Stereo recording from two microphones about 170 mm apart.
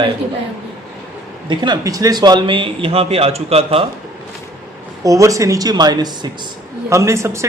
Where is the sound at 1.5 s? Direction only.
25° right (ahead or behind).